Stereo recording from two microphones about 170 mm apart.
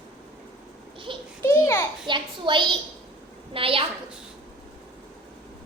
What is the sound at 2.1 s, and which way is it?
A woman's voice, 30° right (ahead or behind).